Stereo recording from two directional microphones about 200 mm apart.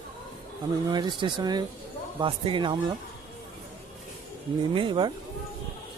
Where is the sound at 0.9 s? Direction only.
20° right (ahead or behind).